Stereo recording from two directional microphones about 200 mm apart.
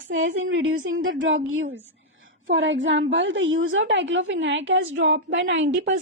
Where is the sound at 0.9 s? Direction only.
75° right (ahead or behind).